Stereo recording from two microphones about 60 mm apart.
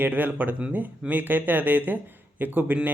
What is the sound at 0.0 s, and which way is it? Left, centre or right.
A man's voice, right.